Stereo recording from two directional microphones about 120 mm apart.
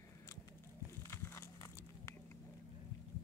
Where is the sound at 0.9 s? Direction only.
20° left (ahead or behind).